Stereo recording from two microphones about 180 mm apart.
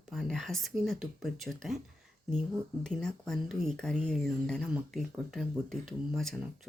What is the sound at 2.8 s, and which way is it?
Speech, 5° left (ahead or behind).